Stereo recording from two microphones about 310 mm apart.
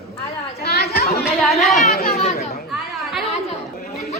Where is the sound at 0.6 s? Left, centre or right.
Left.